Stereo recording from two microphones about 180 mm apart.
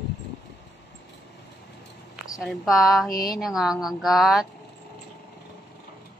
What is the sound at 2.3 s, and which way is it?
Speech, centre (ahead or behind).